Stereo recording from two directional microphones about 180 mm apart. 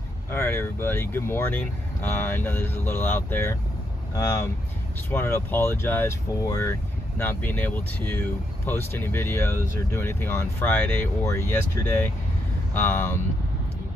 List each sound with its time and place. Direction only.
0.3 s speech: 10° left (ahead or behind)